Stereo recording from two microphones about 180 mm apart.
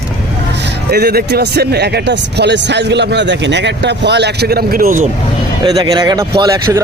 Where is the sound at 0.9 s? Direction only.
60° right (ahead or behind).